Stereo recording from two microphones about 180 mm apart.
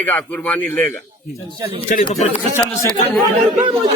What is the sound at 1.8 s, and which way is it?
Speech, 45° left (ahead or behind).